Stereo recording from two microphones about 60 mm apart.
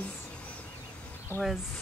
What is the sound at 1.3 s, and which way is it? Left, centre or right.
Speech, left.